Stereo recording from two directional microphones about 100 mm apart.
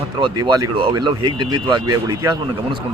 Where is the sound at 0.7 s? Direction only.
55° right (ahead or behind).